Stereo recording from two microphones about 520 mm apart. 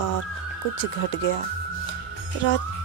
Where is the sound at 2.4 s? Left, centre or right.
Centre.